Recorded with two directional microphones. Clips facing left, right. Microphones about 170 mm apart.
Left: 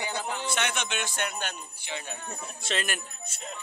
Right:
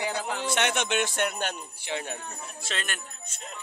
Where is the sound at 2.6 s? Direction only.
Centre (ahead or behind).